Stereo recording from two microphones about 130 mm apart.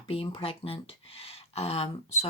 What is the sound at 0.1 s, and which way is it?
Speech, 45° left (ahead or behind).